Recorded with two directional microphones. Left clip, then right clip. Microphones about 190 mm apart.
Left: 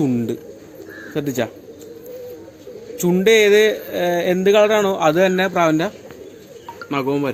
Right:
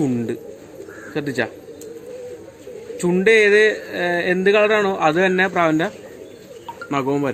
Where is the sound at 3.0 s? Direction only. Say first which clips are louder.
Left 1 dB; 40° left (ahead or behind).